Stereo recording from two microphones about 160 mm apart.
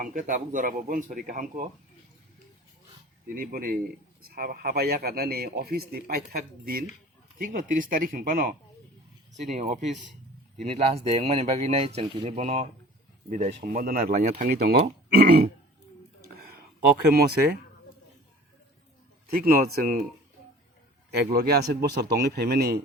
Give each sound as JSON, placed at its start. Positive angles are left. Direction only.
{"t": 0.0, "sound": "speech", "side_deg": -55}
{"t": 3.3, "sound": "a man's voice", "side_deg": -65}
{"t": 7.3, "sound": "speech", "side_deg": -55}
{"t": 9.4, "sound": "speech", "side_deg": -45}
{"t": 13.7, "sound": "speech", "side_deg": -60}
{"t": 17.1, "sound": "a man's voice", "side_deg": -75}
{"t": 19.3, "sound": "speech", "side_deg": -65}
{"t": 21.1, "sound": "a man's voice", "side_deg": -85}